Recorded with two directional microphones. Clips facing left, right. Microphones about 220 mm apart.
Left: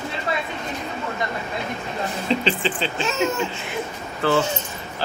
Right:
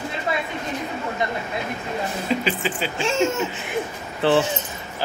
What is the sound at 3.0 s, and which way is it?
Speech, 30° right (ahead or behind).